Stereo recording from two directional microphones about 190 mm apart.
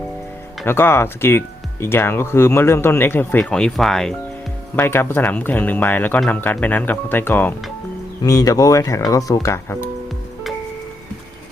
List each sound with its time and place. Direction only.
0.6 s speech: 10° left (ahead or behind)